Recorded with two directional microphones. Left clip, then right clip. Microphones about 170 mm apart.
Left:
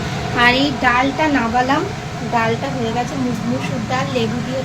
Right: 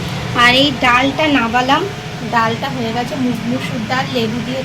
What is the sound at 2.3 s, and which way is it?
Speech, 15° right (ahead or behind).